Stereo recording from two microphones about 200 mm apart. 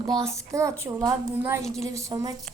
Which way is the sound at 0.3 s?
15° right (ahead or behind).